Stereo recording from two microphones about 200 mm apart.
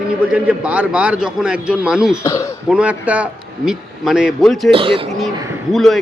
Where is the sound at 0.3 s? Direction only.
5° right (ahead or behind).